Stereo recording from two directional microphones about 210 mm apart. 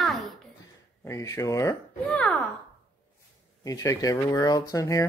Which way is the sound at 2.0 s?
5° left (ahead or behind).